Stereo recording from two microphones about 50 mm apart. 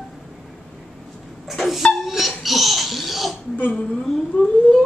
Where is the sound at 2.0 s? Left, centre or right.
Centre.